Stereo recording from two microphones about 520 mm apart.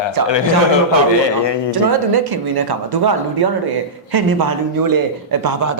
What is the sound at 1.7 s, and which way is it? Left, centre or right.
Speech, right.